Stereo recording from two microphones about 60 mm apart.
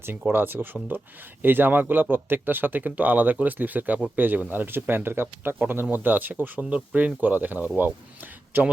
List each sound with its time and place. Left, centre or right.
0.3 s speech: right
6.4 s speech: right